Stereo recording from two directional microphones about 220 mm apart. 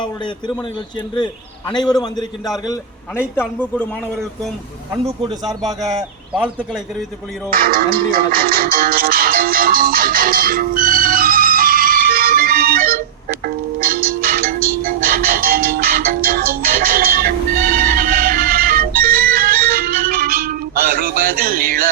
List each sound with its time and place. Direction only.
1.1 s a man's voice: 20° left (ahead or behind)
3.4 s a man's voice: 5° left (ahead or behind)
5.0 s speech: 15° right (ahead or behind)
7.5 s speech: 40° right (ahead or behind)
13.4 s music: 40° right (ahead or behind)